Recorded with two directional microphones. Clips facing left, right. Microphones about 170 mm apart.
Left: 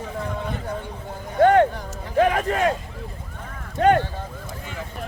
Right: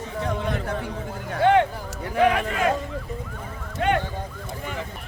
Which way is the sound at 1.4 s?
45° left (ahead or behind).